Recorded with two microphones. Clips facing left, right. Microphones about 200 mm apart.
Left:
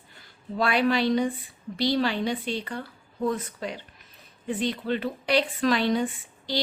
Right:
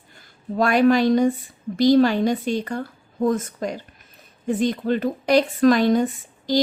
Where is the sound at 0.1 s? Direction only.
45° right (ahead or behind).